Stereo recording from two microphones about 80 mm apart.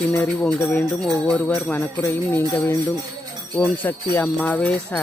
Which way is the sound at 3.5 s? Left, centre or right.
Centre.